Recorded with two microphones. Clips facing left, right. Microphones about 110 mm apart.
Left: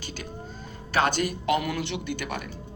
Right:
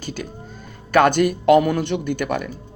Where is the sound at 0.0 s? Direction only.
45° right (ahead or behind).